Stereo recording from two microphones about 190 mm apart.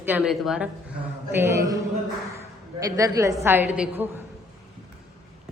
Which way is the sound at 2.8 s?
15° right (ahead or behind).